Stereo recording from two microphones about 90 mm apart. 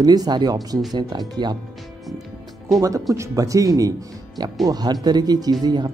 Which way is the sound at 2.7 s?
40° right (ahead or behind).